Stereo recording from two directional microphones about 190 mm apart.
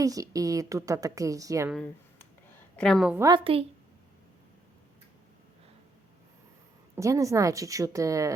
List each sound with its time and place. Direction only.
0.0 s a woman's voice: 20° right (ahead or behind)
1.7 s a woman's voice: 5° left (ahead or behind)
3.2 s a woman's voice: 20° right (ahead or behind)
6.9 s a woman's voice: 15° right (ahead or behind)